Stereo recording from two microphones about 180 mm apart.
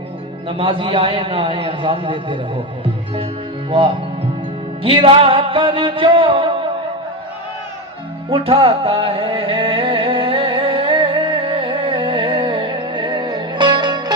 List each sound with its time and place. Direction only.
0.4 s a man's voice: 30° right (ahead or behind)
4.8 s music: 30° right (ahead or behind)
8.3 s music: 30° right (ahead or behind)